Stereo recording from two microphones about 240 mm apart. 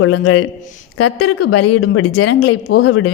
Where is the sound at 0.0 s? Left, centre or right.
Left.